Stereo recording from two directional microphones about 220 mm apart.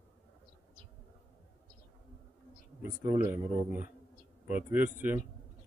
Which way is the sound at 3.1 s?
10° right (ahead or behind).